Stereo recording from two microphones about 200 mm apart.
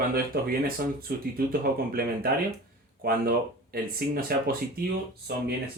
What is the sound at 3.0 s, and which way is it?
Speech, 50° right (ahead or behind).